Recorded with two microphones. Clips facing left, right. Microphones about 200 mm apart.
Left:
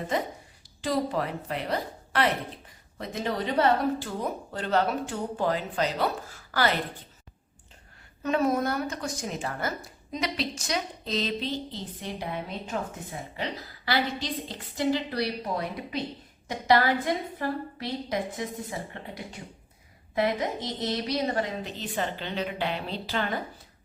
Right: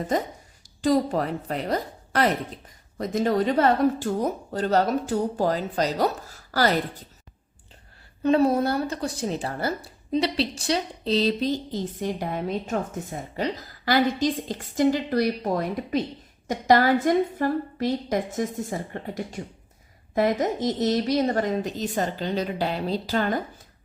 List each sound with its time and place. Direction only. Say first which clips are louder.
0.1 s a woman's voice: right 3 dB; 45° right (ahead or behind)
8.2 s a woman's voice: right 5 dB; 30° right (ahead or behind)